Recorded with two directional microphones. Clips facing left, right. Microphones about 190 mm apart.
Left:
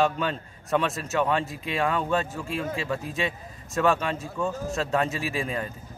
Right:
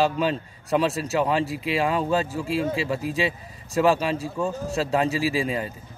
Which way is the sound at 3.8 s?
30° right (ahead or behind).